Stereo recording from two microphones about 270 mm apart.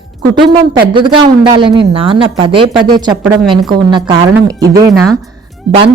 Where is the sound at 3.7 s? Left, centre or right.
Centre.